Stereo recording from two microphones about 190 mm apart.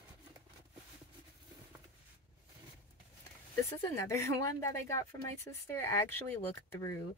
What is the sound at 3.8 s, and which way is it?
Speech, 15° left (ahead or behind).